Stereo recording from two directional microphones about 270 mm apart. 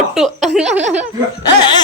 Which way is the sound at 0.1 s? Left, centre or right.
Centre.